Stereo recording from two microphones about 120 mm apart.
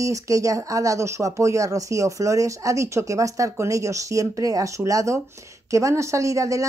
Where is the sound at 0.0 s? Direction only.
25° right (ahead or behind).